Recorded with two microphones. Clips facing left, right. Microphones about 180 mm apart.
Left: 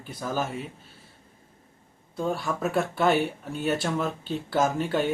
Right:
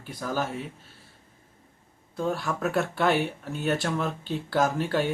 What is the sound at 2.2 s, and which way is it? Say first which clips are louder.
Speech: even; centre (ahead or behind).